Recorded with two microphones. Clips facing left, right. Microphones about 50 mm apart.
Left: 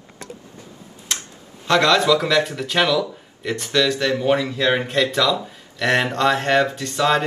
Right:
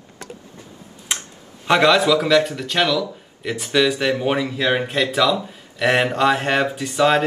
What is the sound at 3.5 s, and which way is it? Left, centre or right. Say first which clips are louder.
Speech: right 1 dB; centre.